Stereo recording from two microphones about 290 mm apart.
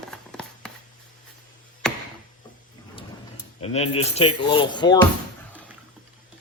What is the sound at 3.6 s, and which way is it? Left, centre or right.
Speech, left.